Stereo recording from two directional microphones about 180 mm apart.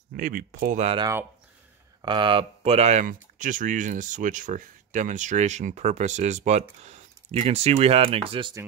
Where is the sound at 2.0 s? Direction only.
25° right (ahead or behind).